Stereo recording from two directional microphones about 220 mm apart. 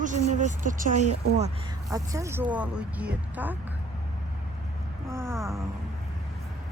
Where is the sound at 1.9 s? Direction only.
15° right (ahead or behind).